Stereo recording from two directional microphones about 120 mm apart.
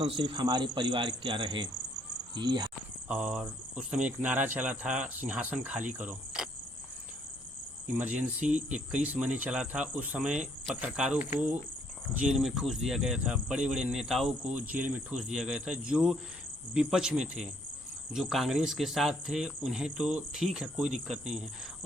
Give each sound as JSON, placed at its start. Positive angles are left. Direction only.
{"t": 0.0, "sound": "speech", "side_deg": -40}
{"t": 3.1, "sound": "speech", "side_deg": -5}
{"t": 8.3, "sound": "speech", "side_deg": -10}